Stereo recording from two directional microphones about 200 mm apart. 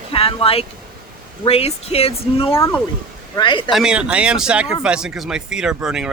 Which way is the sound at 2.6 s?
15° left (ahead or behind).